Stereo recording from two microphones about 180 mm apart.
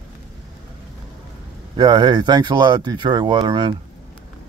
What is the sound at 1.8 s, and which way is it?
Speech, 25° right (ahead or behind).